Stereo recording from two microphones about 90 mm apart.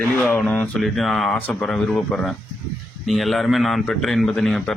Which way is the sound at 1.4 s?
20° left (ahead or behind).